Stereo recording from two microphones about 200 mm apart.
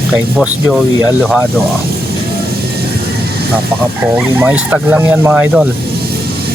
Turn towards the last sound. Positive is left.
turn(degrees=-5)  # may be behind; listen again after turning